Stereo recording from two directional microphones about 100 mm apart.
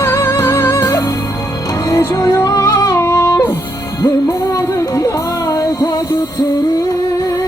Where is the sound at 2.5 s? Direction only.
40° left (ahead or behind).